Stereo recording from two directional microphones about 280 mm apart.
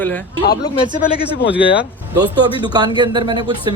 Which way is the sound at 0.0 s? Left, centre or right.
Centre.